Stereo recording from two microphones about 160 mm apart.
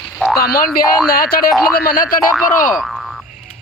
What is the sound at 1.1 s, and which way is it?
Boing, 65° left (ahead or behind).